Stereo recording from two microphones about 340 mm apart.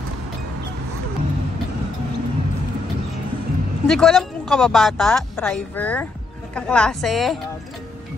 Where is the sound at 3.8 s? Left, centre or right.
Centre.